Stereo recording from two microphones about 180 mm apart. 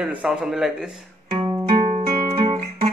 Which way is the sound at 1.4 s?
25° right (ahead or behind).